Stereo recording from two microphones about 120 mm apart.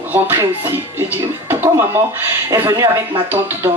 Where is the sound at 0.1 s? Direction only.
20° right (ahead or behind).